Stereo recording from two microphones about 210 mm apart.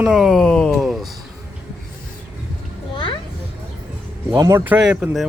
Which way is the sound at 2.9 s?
25° left (ahead or behind).